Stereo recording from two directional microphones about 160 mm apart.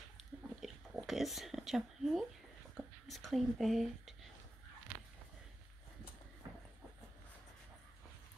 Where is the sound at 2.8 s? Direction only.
Centre (ahead or behind).